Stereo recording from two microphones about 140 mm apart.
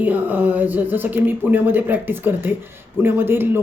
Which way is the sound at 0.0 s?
10° right (ahead or behind).